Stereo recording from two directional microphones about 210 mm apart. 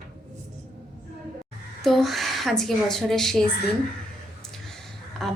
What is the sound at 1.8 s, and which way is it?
Speech, centre (ahead or behind).